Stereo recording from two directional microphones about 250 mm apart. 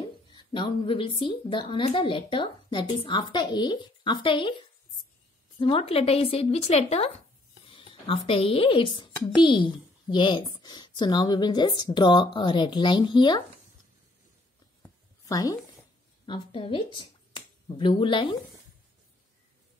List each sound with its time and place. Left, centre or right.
0.3 s a woman's voice: centre
5.6 s a woman's voice: left
15.2 s a woman's voice: centre